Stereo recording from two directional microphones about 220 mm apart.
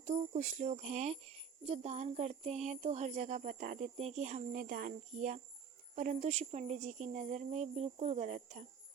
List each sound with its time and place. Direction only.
0.0 s speech: 30° right (ahead or behind)